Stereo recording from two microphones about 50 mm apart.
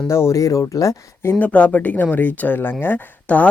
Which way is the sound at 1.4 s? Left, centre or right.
Left.